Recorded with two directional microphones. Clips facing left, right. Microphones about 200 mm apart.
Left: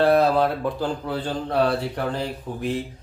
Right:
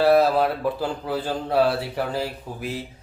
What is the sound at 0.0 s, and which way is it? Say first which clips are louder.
Speech: even; 5° right (ahead or behind).